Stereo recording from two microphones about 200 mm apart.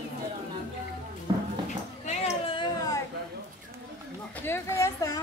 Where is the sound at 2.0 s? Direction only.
35° left (ahead or behind).